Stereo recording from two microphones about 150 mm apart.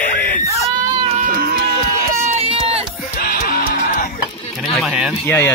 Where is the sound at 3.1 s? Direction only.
75° left (ahead or behind).